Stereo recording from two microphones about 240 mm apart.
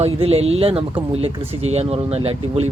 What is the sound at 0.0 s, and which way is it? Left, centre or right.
Speech, right.